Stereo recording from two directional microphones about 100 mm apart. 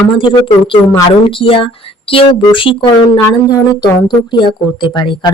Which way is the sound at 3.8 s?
50° left (ahead or behind).